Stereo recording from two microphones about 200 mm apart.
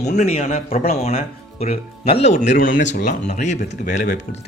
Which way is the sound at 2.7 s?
65° left (ahead or behind).